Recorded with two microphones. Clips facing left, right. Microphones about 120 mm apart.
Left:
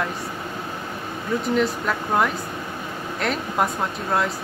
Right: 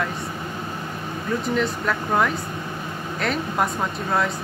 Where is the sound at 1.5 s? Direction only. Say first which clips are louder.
Left 2 dB; centre (ahead or behind).